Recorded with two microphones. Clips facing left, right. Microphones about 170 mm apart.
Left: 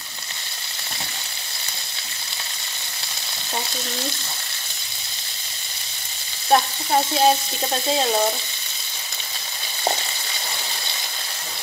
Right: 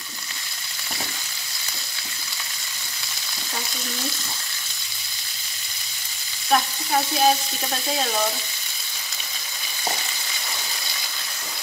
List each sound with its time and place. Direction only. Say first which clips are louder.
6.5 s frying: left 3 dB; 30° left (ahead or behind)